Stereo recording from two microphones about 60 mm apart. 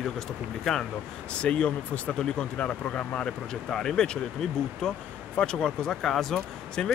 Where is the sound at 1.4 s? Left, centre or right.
Centre.